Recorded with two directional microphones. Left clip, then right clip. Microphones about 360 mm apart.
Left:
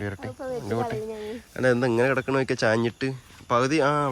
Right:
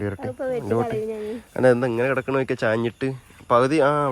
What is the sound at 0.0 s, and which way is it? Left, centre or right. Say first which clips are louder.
Speech: right 5 dB; centre.